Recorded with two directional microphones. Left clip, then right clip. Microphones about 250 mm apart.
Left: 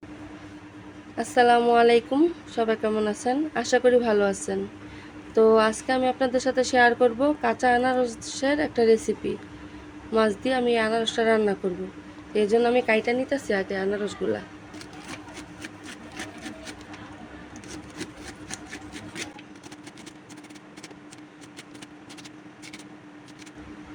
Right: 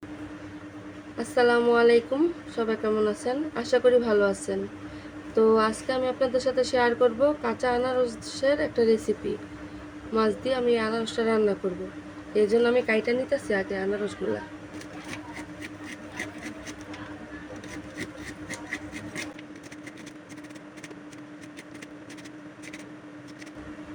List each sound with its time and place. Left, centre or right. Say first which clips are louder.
1.1 s a woman's voice: left 3 dB; left